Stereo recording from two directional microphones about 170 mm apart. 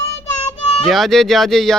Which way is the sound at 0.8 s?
Centre (ahead or behind).